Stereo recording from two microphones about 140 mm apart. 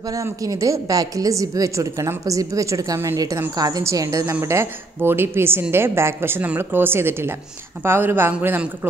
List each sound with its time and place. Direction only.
0.1 s a woman's voice: 25° right (ahead or behind)